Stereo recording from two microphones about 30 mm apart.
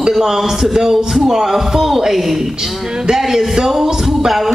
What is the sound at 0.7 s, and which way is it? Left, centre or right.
A man's voice, centre.